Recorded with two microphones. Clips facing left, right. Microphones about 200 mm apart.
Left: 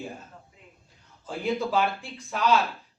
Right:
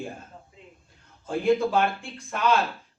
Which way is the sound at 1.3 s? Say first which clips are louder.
Right 5 dB; 50° right (ahead or behind).